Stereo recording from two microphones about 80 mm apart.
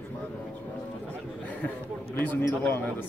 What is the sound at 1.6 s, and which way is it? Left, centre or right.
A man's voice, left.